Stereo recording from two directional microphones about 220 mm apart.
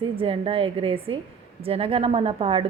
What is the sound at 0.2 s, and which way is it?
A woman's voice, 25° right (ahead or behind).